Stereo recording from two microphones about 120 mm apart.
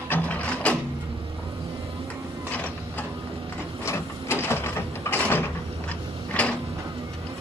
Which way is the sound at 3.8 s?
20° left (ahead or behind).